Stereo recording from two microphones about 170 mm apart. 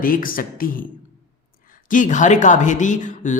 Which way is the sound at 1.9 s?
50° left (ahead or behind).